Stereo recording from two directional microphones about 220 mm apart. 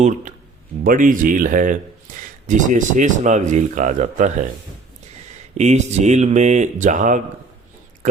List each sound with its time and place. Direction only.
0.0 s speech: 35° right (ahead or behind)
5.5 s speech: 30° right (ahead or behind)